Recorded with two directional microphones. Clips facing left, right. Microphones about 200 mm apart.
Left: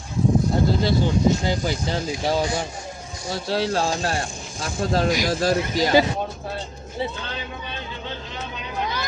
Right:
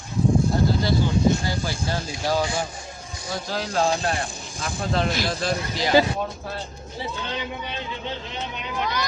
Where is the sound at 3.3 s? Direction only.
30° left (ahead or behind).